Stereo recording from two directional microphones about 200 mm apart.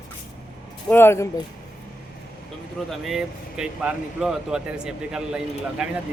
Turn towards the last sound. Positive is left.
turn(degrees=-5)  # may be behind; listen again after turning